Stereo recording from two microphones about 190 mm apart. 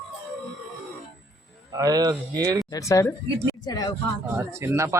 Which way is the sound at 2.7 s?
15° left (ahead or behind).